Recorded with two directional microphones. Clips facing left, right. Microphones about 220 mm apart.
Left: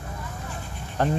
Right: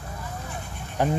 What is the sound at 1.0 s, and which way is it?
Speech, 10° right (ahead or behind).